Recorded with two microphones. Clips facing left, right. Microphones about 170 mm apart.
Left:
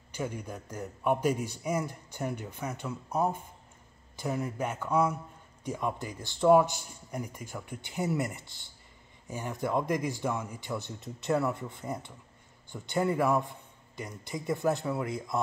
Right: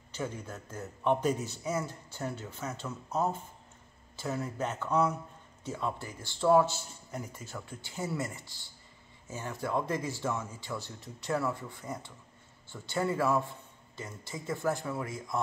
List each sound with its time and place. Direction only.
0.1 s a man's voice: 15° left (ahead or behind)